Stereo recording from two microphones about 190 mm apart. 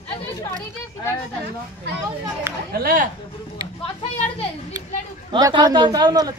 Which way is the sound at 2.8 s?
50° right (ahead or behind).